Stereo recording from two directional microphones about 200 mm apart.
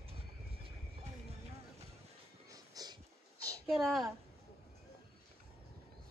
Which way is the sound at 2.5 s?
20° right (ahead or behind).